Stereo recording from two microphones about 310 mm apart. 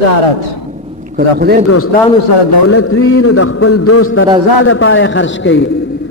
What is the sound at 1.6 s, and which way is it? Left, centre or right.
A man's voice, left.